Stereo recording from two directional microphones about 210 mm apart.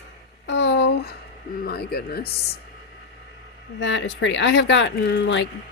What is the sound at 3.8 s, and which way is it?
Speech, 60° left (ahead or behind).